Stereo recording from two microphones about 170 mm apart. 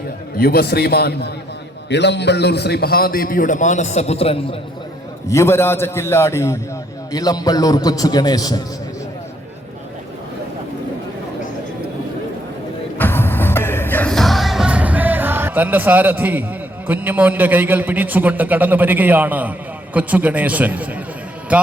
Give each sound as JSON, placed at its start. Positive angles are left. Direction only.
{"t": 0.3, "sound": "a man's voice", "side_deg": 65}
{"t": 1.9, "sound": "a man's voice", "side_deg": 90}
{"t": 5.3, "sound": "a man's voice", "side_deg": 15}
{"t": 13.0, "sound": "music", "side_deg": 10}
{"t": 21.5, "sound": "a man's voice", "side_deg": -10}